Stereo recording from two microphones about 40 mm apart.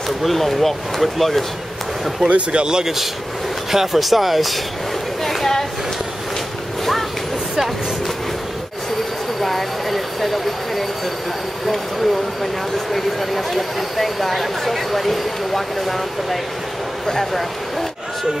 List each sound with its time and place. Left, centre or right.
0.2 s speech: centre
2.2 s speech: right
3.7 s speech: centre
5.2 s a sound: centre
9.4 s vehicle: centre
11.6 s speech: centre